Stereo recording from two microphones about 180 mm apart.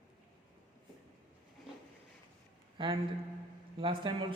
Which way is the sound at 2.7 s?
30° right (ahead or behind).